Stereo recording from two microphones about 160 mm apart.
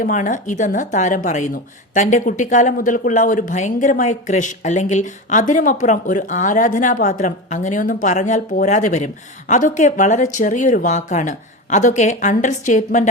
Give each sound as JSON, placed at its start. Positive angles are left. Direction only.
{"t": 0.0, "sound": "speech", "side_deg": 55}